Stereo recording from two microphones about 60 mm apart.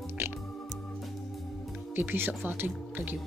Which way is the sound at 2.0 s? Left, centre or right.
Right.